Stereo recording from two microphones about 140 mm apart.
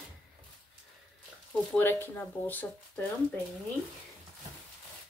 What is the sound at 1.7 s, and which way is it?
A woman's voice, 15° left (ahead or behind).